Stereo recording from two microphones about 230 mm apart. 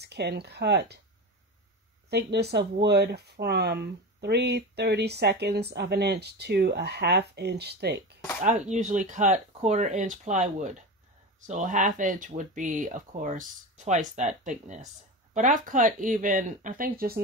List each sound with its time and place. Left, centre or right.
0.0 s speech: right
2.0 s speech: right
8.4 s speech: right